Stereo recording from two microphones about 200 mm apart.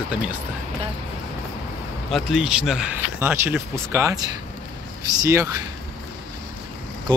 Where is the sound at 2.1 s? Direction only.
Centre (ahead or behind); by 4.3 s 15° right (ahead or behind).